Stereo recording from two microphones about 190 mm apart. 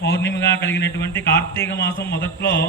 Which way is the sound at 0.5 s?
10° left (ahead or behind).